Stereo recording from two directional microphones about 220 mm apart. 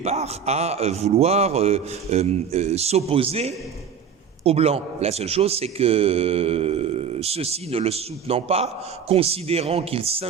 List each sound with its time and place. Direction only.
0.0 s speech: 30° right (ahead or behind)